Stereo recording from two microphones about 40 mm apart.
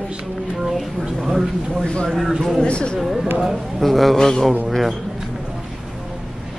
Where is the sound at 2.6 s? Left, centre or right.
Left.